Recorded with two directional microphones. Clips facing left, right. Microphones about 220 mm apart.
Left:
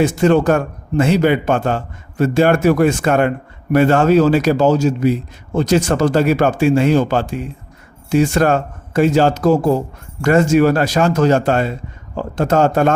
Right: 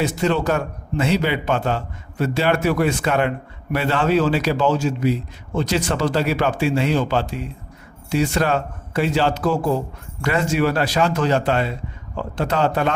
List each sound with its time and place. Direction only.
0.0 s a man's voice: 50° left (ahead or behind)